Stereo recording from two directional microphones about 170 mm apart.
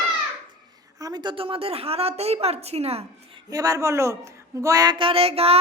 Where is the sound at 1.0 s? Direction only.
25° right (ahead or behind).